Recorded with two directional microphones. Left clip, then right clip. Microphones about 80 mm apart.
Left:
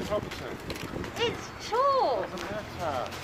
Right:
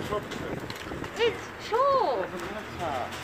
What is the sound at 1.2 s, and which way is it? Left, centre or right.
Speech, left.